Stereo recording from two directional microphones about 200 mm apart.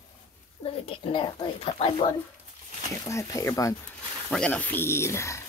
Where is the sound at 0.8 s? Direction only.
25° left (ahead or behind).